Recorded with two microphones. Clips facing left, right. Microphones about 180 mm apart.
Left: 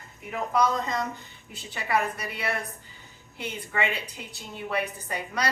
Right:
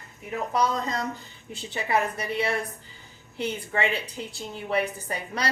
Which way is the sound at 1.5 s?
25° right (ahead or behind).